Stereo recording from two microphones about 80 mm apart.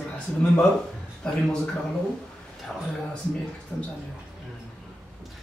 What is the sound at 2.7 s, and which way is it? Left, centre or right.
Speech, centre.